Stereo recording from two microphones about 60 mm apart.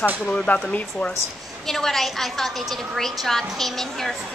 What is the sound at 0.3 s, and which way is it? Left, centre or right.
Speech, centre.